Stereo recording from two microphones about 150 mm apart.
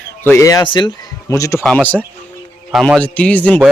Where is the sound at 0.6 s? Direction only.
30° left (ahead or behind).